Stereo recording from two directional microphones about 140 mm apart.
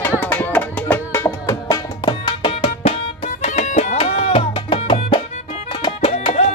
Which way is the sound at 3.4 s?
55° left (ahead or behind).